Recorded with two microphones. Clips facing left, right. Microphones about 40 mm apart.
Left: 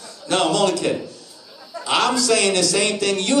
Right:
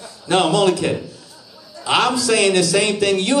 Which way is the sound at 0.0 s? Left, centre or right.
Right.